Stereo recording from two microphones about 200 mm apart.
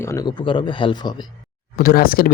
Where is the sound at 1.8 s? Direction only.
45° left (ahead or behind).